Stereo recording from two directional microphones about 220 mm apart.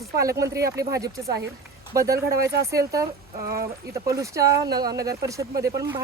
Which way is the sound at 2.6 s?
15° right (ahead or behind).